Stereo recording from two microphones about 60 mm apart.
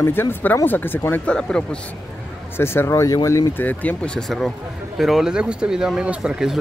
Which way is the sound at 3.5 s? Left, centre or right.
Left.